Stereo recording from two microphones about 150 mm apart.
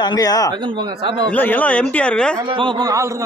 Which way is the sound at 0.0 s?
25° left (ahead or behind).